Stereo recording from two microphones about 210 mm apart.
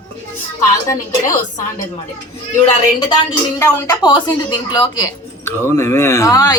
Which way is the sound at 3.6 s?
10° left (ahead or behind).